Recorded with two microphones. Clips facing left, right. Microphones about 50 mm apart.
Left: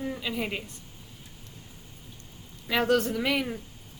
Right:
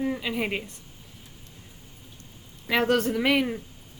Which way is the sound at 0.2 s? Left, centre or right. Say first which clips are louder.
Right 3 dB; right.